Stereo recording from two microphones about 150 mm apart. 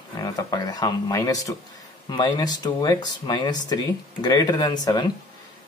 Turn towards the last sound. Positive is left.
turn(degrees=25)  # may be behind; listen again after turning